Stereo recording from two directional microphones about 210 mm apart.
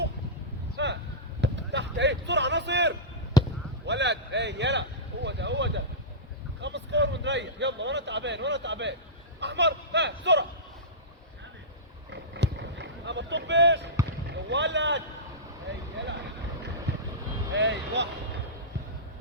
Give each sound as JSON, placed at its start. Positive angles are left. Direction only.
{"t": 0.8, "sound": "a sound", "side_deg": -55}
{"t": 3.3, "sound": "basketball bounce", "side_deg": 20}
{"t": 3.8, "sound": "a sound", "side_deg": -55}
{"t": 6.6, "sound": "speech", "side_deg": -60}
{"t": 12.1, "sound": "boat", "side_deg": -55}
{"t": 14.5, "sound": "speech", "side_deg": -55}
{"t": 16.9, "sound": "vehicle", "side_deg": -55}
{"t": 17.5, "sound": "speech", "side_deg": -60}